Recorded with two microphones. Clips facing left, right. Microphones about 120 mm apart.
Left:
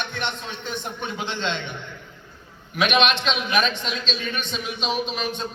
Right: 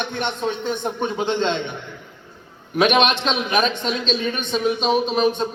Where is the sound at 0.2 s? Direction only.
50° right (ahead or behind).